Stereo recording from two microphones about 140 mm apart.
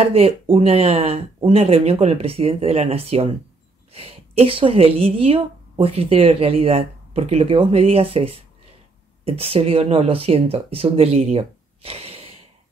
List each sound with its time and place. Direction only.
0.0 s a woman's voice: 45° right (ahead or behind)